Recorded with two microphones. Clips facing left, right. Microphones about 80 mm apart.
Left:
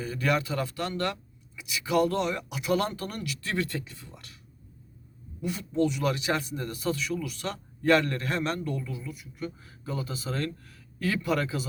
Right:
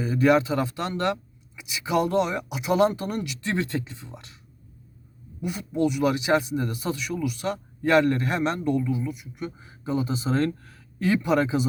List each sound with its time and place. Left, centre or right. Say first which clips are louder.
0.0 s speech: right 8 dB; right
5.4 s speech: right 2 dB; centre